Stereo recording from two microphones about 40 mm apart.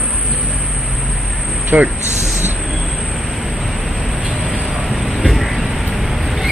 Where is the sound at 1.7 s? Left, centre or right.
Right.